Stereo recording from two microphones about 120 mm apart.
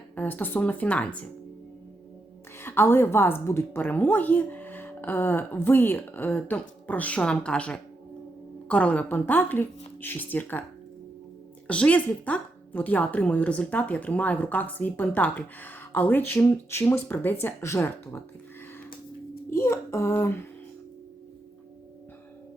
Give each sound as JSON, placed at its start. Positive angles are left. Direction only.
{"t": 0.2, "sound": "speech", "side_deg": 15}
{"t": 2.6, "sound": "speech", "side_deg": 20}
{"t": 11.7, "sound": "speech", "side_deg": 10}
{"t": 19.5, "sound": "a child's voice", "side_deg": 20}